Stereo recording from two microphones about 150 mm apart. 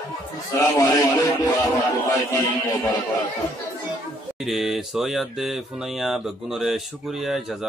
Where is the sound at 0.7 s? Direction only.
25° left (ahead or behind).